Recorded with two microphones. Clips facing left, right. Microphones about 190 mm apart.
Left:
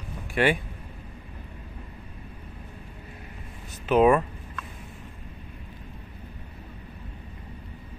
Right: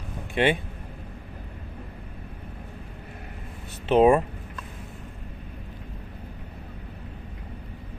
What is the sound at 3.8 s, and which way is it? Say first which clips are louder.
Speech: right 1 dB; 30° right (ahead or behind).